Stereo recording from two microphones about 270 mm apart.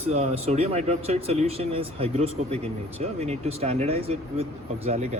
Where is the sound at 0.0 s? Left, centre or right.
Right.